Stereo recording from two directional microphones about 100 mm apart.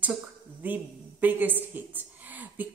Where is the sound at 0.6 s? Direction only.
15° right (ahead or behind).